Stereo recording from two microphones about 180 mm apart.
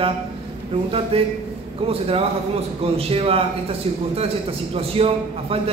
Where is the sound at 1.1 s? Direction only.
30° right (ahead or behind).